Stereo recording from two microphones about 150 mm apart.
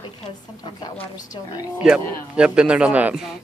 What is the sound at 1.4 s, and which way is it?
Speech, 35° left (ahead or behind).